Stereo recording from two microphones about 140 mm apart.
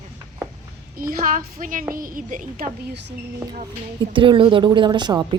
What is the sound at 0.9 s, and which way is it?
A woman's voice, 90° right.